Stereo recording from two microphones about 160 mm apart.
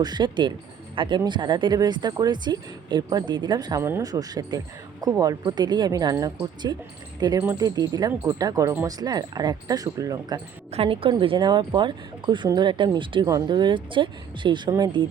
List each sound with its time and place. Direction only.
0.0 s speech: 25° right (ahead or behind)
10.7 s a woman's voice: 35° right (ahead or behind)